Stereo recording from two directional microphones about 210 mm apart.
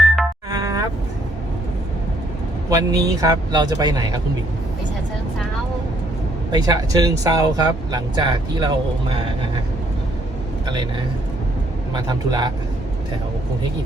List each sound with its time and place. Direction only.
0.5 s a sound: 15° right (ahead or behind)
2.6 s a man's voice: 15° right (ahead or behind)
6.5 s a man's voice: 20° right (ahead or behind)
11.9 s a man's voice: 20° right (ahead or behind)